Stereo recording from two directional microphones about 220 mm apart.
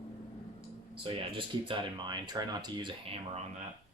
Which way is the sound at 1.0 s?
25° right (ahead or behind).